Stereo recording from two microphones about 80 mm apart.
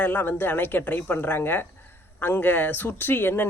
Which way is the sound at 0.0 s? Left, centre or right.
Left.